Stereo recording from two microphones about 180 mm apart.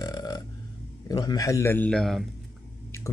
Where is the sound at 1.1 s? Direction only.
20° left (ahead or behind); by 2.3 s centre (ahead or behind).